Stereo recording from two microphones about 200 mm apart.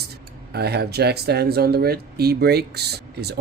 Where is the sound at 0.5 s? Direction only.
55° right (ahead or behind).